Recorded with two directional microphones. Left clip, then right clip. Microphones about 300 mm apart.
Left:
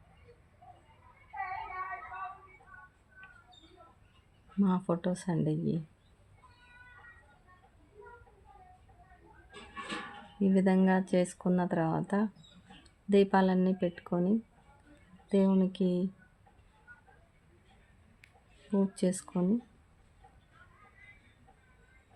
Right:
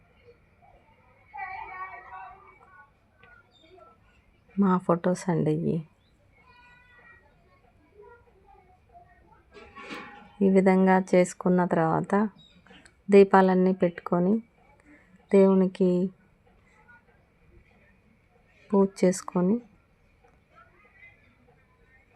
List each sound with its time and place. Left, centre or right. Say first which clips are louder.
4.6 s speech: right 8 dB; centre
10.4 s speech: right 8 dB; centre
18.7 s speech: right 9 dB; centre